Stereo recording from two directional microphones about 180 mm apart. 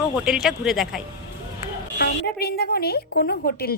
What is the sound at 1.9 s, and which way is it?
A woman's voice, 60° left (ahead or behind).